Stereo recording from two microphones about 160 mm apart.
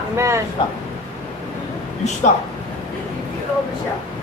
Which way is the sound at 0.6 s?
30° left (ahead or behind).